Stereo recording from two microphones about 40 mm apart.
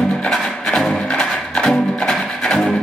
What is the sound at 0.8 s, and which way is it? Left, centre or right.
Music, left.